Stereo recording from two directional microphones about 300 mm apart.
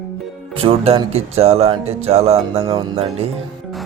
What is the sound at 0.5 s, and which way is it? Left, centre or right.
Speech, centre.